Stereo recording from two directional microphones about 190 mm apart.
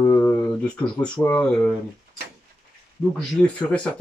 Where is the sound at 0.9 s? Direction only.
5° left (ahead or behind).